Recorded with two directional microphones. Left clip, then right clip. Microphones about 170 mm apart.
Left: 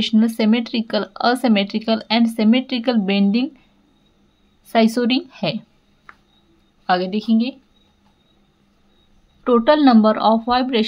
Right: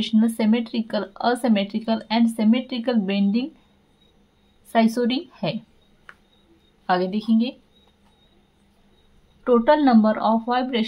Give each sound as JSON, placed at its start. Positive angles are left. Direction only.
{"t": 0.0, "sound": "speech", "side_deg": 20}
{"t": 4.7, "sound": "speech", "side_deg": 20}
{"t": 6.1, "sound": "a sound", "side_deg": -10}
{"t": 6.9, "sound": "a woman's voice", "side_deg": 15}
{"t": 9.4, "sound": "speech", "side_deg": 20}